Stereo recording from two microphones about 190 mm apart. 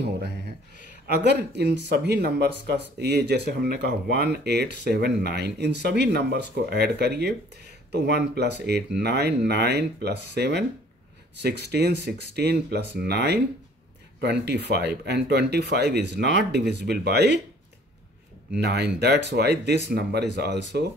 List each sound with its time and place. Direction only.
0.0 s a sound: 60° right (ahead or behind)
1.0 s speech: 60° right (ahead or behind)
18.6 s speech: 60° right (ahead or behind)